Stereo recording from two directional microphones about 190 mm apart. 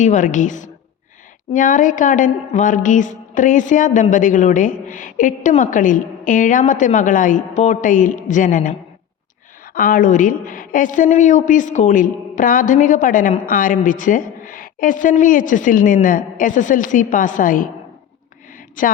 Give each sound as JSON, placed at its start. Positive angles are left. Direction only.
{"t": 0.0, "sound": "a woman's voice", "side_deg": 40}
{"t": 9.7, "sound": "a woman's voice", "side_deg": 45}
{"t": 18.8, "sound": "a woman's voice", "side_deg": 45}